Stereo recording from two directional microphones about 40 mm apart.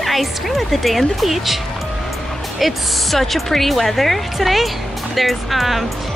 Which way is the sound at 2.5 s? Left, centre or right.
Centre.